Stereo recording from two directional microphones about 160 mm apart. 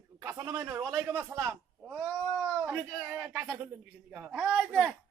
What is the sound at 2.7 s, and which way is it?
A man's voice, 15° right (ahead or behind).